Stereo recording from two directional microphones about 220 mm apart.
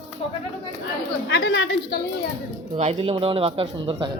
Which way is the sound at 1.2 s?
50° left (ahead or behind).